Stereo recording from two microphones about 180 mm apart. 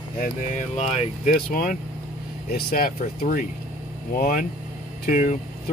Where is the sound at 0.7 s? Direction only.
40° left (ahead or behind).